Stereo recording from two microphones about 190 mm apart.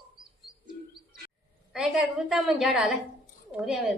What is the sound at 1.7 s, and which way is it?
A woman's voice, centre (ahead or behind).